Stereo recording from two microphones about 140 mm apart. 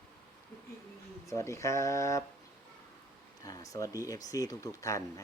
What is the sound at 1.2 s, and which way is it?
Speech, 20° left (ahead or behind).